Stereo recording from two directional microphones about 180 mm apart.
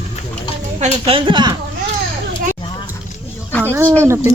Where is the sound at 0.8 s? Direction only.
30° right (ahead or behind).